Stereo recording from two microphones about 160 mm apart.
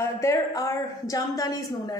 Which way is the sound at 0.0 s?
20° left (ahead or behind).